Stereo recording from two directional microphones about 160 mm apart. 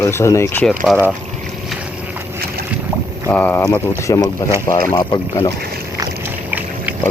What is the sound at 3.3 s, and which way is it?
Speech, 10° left (ahead or behind).